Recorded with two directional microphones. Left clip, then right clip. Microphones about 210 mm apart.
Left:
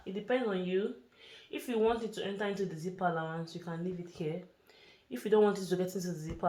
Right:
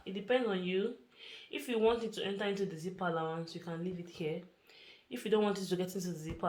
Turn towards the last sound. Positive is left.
turn(degrees=25)  # may be behind; listen again after turning